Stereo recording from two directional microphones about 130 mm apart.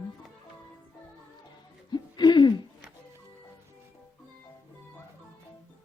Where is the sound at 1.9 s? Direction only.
35° left (ahead or behind).